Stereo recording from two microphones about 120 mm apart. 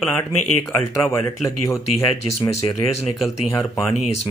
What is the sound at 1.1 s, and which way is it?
Speech, 25° left (ahead or behind).